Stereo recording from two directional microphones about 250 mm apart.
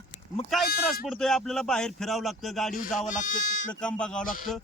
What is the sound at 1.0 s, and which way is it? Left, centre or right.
Speech, centre.